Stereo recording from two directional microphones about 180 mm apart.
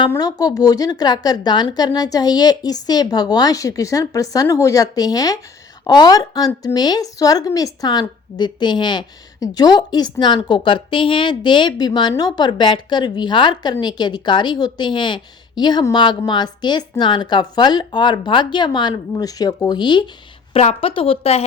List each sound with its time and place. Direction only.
0.1 s a woman's voice: 20° left (ahead or behind)